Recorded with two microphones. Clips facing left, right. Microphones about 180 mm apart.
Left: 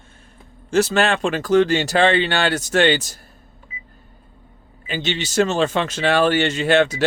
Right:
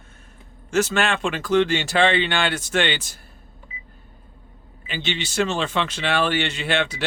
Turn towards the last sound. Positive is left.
turn(degrees=40)  # may be behind; listen again after turning